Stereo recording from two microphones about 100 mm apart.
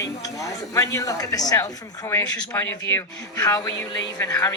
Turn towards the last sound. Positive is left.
turn(degrees=35)  # may be behind; listen again after turning